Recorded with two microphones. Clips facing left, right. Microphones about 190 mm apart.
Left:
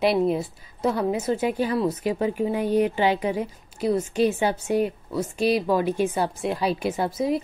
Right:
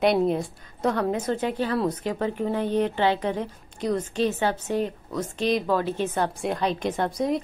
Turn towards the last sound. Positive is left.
turn(degrees=5)  # may be behind; listen again after turning